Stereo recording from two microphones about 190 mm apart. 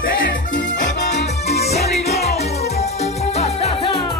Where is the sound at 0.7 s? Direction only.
65° left (ahead or behind).